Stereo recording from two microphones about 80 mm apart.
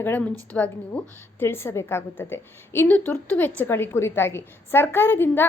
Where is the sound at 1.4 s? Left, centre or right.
Left.